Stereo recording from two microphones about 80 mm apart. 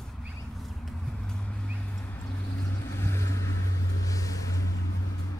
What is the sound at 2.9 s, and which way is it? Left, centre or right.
Vehicle, left.